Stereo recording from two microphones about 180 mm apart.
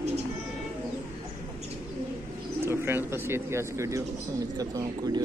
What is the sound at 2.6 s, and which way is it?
Speech, 15° right (ahead or behind).